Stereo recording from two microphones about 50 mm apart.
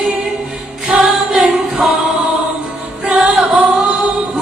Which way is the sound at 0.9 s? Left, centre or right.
Right.